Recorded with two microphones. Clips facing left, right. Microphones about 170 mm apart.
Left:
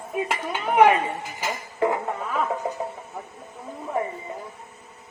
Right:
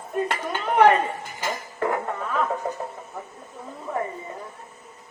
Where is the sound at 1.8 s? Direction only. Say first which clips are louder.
Left 3 dB; 15° left (ahead or behind).